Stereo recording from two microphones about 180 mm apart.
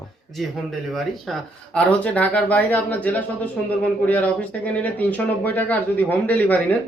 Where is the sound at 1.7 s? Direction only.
10° left (ahead or behind).